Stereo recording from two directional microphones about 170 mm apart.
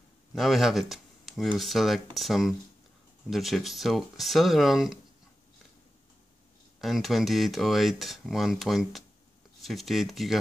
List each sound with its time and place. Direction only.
0.3 s speech: centre (ahead or behind)
6.8 s speech: centre (ahead or behind)